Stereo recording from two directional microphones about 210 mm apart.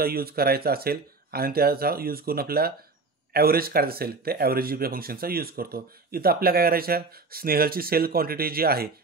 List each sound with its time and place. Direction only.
0.0 s speech: 45° right (ahead or behind)